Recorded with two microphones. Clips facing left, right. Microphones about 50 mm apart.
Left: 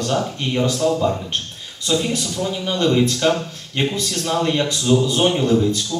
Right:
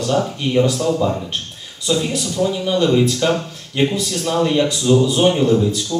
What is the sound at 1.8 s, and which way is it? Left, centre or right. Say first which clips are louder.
Speech: right 1 dB; centre.